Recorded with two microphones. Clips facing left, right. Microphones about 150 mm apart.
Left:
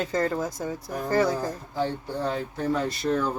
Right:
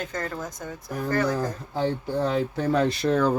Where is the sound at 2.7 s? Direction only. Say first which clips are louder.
Right 5 dB; 90° right.